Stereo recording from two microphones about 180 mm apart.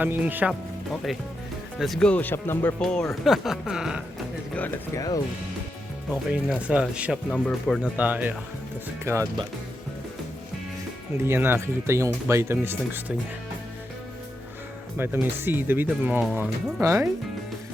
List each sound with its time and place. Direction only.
0.0 s speech: 10° right (ahead or behind)
1.8 s speech: centre (ahead or behind)
4.5 s speech: 10° left (ahead or behind)
6.3 s speech: 5° right (ahead or behind)
11.2 s speech: 15° right (ahead or behind)
14.9 s speech: 10° right (ahead or behind)